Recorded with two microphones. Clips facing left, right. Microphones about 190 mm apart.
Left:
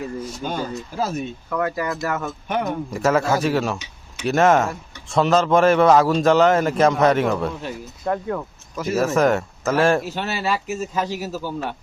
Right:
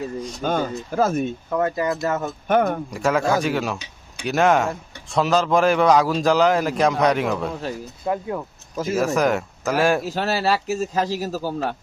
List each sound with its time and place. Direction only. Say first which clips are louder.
0.4 s speech: right 5 dB; 50° right (ahead or behind)
1.5 s speech: right 2 dB; 25° right (ahead or behind)
2.5 s speech: right 5 dB; 50° right (ahead or behind)
2.9 s a man's voice: left 3 dB; 5° left (ahead or behind)
8.0 s speech: left 1 dB; 15° right (ahead or behind)
9.0 s a man's voice: left 2 dB; centre (ahead or behind)
10.1 s speech: right 3 dB; 40° right (ahead or behind)